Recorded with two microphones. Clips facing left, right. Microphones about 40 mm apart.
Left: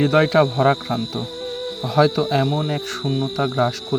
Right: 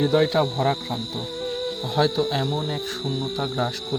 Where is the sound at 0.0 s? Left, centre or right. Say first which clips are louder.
Left 4 dB; left.